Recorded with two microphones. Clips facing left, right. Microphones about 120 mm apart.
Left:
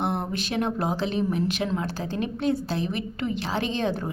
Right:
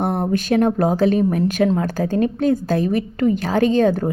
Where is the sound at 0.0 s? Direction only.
45° right (ahead or behind).